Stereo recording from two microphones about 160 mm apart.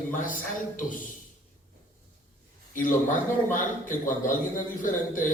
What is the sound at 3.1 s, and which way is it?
A man's voice, 55° left (ahead or behind).